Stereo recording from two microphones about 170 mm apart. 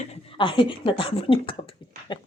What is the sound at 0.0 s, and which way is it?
Speech, 35° left (ahead or behind).